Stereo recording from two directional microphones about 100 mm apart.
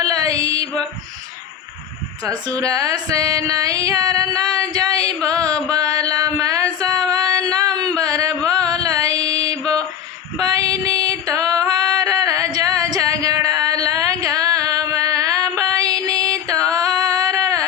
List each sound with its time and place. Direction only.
0.0 s music: 35° right (ahead or behind)
2.6 s music: 35° right (ahead or behind)
7.6 s a sound: 40° right (ahead or behind)
8.4 s mantra: 40° right (ahead or behind)
10.7 s music: 35° right (ahead or behind)